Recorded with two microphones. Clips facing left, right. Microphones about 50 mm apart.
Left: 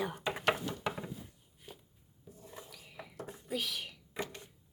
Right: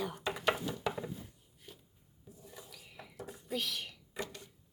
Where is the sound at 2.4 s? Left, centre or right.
Left.